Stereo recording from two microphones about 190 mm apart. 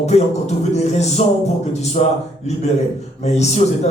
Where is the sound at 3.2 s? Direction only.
35° left (ahead or behind).